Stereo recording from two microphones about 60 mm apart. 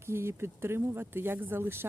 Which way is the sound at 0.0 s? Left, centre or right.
Right.